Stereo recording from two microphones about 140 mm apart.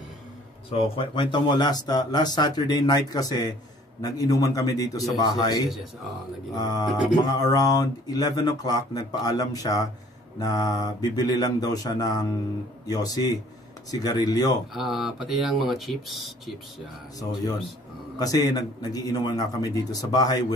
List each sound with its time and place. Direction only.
0.7 s speech: 40° left (ahead or behind)
14.7 s speech: centre (ahead or behind)
17.2 s speech: 30° left (ahead or behind)